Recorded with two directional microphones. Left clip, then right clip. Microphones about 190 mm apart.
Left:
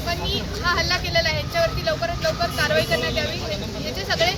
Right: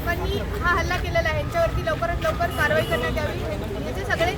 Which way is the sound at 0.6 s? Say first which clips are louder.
Left 1 dB; 10° left (ahead or behind).